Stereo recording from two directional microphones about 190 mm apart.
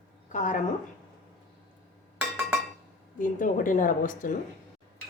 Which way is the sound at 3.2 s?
45° left (ahead or behind).